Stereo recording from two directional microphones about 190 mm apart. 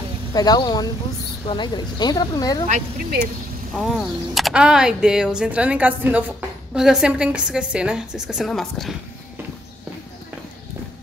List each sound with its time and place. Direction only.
0.3 s speech: 20° left (ahead or behind)
3.7 s speech: centre (ahead or behind)